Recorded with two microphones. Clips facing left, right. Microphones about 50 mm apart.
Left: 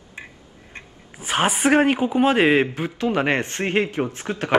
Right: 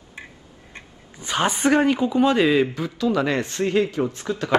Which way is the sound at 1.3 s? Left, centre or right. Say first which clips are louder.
Left 1 dB; left.